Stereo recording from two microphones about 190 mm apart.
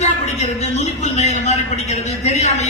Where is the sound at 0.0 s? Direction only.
35° left (ahead or behind).